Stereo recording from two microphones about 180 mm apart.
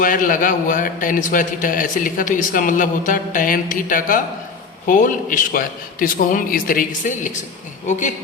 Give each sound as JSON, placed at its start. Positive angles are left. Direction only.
{"t": 0.0, "sound": "a man's voice", "side_deg": 50}